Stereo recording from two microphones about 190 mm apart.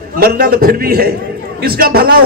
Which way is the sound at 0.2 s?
50° right (ahead or behind).